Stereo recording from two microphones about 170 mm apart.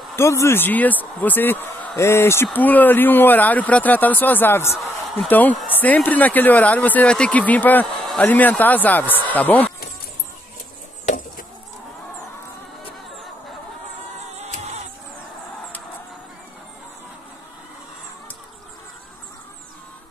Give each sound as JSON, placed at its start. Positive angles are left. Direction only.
{"t": 0.1, "sound": "speech", "side_deg": 15}
{"t": 11.1, "sound": "chicken", "side_deg": 50}
{"t": 14.4, "sound": "music", "side_deg": -40}